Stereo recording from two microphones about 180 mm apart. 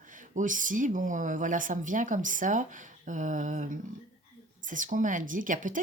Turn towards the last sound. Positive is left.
turn(degrees=-45)  # may be behind; listen again after turning